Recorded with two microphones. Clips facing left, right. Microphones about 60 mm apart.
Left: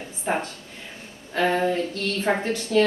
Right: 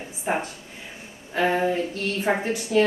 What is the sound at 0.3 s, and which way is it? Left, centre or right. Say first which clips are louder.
Speech: even; centre.